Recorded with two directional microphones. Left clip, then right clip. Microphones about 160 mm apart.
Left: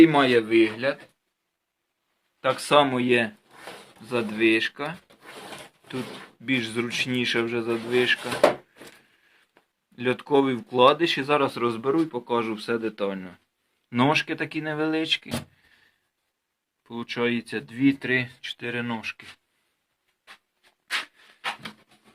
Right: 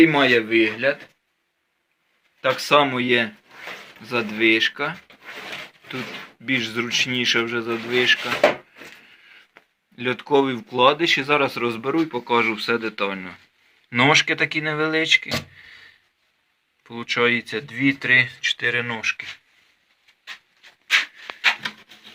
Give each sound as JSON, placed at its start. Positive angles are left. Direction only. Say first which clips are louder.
{"t": 0.0, "sound": "speech", "louder": "right 2 dB", "side_deg": 5}
{"t": 2.4, "sound": "speech", "louder": "right 2 dB", "side_deg": 5}
{"t": 6.4, "sound": "speech", "louder": "right 3 dB", "side_deg": 10}
{"t": 9.9, "sound": "speech", "louder": "right 3 dB", "side_deg": 5}
{"t": 16.8, "sound": "speech", "louder": "right 7 dB", "side_deg": 0}